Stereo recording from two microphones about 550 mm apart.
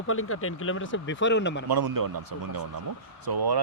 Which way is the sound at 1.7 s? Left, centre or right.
Right.